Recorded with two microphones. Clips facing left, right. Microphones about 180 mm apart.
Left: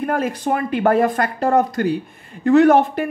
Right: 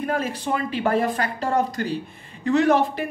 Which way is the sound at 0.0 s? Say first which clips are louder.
Left 4 dB; 50° left (ahead or behind).